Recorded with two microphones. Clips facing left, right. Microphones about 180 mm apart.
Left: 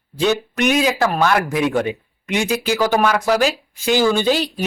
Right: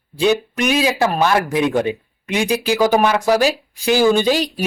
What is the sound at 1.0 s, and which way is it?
A man's voice, 20° right (ahead or behind).